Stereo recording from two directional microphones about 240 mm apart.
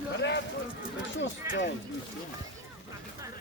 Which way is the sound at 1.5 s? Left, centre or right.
Centre.